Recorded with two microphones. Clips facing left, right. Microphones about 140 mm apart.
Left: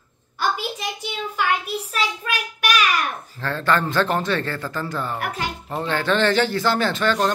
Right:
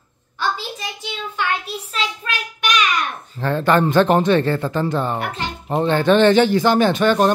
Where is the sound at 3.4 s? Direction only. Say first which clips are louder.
Right 5 dB; 20° right (ahead or behind).